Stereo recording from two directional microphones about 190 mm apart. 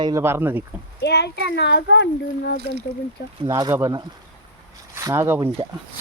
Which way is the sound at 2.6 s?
60° right (ahead or behind).